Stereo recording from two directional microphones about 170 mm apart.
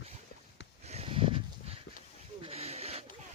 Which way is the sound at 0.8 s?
35° right (ahead or behind).